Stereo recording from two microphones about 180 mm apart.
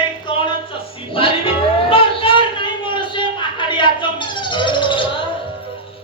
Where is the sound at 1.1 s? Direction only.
30° left (ahead or behind).